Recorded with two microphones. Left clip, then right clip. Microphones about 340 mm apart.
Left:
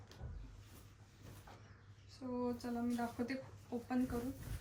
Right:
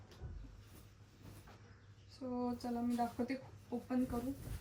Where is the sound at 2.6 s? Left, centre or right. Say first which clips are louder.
Right 3 dB; centre.